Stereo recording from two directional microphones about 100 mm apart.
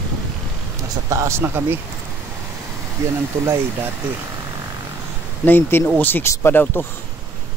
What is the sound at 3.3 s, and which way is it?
Speech, 25° right (ahead or behind).